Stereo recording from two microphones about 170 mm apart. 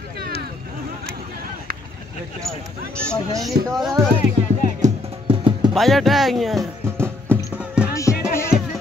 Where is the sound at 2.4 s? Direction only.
5° left (ahead or behind).